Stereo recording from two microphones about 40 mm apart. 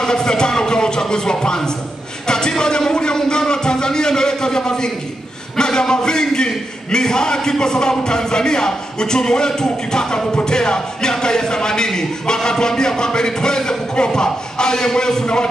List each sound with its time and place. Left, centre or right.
0.0 s a man's voice: centre